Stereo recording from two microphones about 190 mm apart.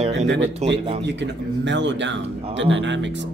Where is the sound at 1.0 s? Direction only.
70° right (ahead or behind).